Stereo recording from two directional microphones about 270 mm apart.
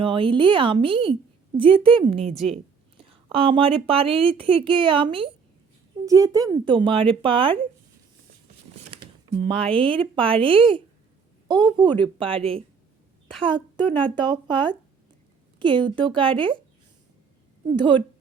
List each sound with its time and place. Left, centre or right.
0.0 s speech: centre
8.9 s a woman's voice: right
17.7 s a woman's voice: centre